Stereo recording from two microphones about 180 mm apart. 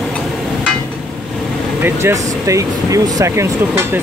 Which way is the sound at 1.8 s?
15° right (ahead or behind).